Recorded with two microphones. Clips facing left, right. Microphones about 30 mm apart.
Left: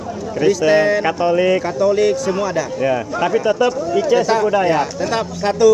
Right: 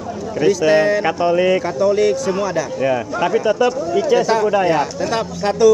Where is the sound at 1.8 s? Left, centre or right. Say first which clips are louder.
Left 1 dB; centre.